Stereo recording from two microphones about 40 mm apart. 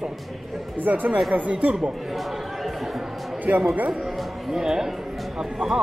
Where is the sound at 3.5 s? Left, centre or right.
Right.